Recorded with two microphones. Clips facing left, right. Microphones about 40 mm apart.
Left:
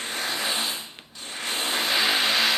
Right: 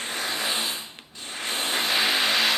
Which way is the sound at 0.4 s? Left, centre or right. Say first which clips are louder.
Even; right.